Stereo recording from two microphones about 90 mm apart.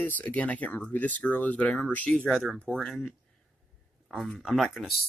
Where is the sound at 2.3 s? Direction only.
Centre (ahead or behind).